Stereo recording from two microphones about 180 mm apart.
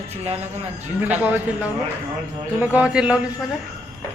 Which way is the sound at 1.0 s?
10° right (ahead or behind).